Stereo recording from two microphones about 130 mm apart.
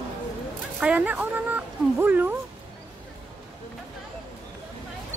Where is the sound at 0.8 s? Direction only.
10° right (ahead or behind).